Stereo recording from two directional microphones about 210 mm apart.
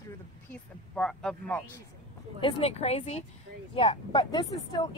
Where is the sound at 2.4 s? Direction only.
25° left (ahead or behind).